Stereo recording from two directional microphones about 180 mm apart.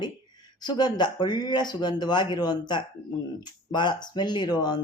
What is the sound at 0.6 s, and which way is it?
Speech, 25° left (ahead or behind).